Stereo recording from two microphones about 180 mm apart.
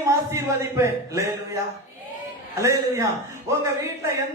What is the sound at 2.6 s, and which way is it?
Speech, 15° right (ahead or behind).